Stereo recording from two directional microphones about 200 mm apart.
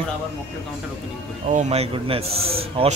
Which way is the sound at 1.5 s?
35° right (ahead or behind).